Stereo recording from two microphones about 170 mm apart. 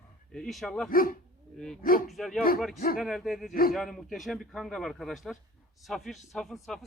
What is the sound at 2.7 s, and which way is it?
Speech, 55° left (ahead or behind).